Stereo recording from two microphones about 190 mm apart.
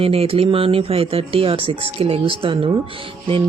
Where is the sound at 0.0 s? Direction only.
30° right (ahead or behind).